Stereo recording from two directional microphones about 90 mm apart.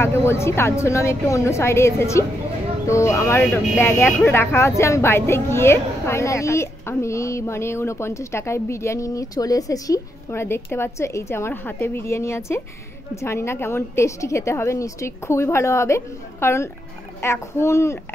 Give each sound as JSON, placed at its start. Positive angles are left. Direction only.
{"t": 0.0, "sound": "a woman's voice", "side_deg": 30}
{"t": 10.3, "sound": "a woman's voice", "side_deg": 30}